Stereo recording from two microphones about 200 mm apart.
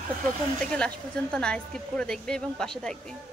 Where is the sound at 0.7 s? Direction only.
5° left (ahead or behind).